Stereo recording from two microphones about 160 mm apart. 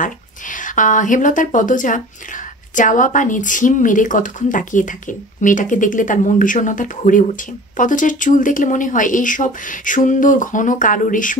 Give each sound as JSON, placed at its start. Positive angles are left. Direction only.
{"t": 0.0, "sound": "a woman's voice", "side_deg": 55}